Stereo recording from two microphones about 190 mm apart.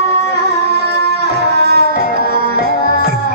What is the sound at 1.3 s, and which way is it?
Tabla, 60° right (ahead or behind).